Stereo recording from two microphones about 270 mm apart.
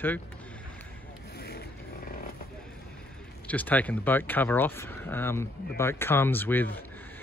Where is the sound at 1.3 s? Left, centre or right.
Left.